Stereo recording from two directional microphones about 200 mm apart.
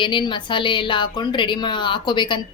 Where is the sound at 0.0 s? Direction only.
25° left (ahead or behind).